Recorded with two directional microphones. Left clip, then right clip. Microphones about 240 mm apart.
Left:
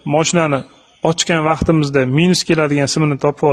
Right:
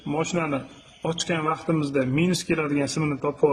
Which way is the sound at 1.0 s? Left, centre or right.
Left.